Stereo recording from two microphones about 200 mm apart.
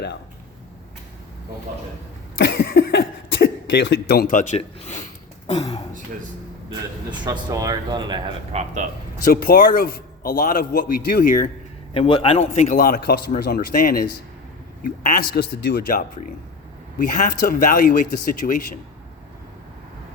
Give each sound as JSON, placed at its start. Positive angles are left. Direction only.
{"t": 2.4, "sound": "cough", "side_deg": 65}
{"t": 2.6, "sound": "speech", "side_deg": 60}
{"t": 5.5, "sound": "speech", "side_deg": 20}
{"t": 7.1, "sound": "speech", "side_deg": -20}
{"t": 9.2, "sound": "a man's voice", "side_deg": 45}
{"t": 11.9, "sound": "a man's voice", "side_deg": 25}
{"t": 15.4, "sound": "a man's voice", "side_deg": 55}